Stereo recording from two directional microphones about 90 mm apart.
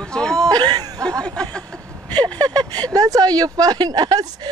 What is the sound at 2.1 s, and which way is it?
A woman's voice, 50° right (ahead or behind).